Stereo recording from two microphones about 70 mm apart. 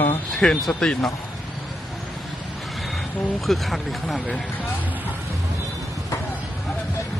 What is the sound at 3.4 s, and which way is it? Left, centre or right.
Speech, centre.